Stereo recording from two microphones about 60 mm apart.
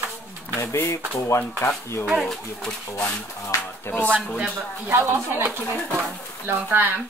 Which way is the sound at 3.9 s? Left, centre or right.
Left.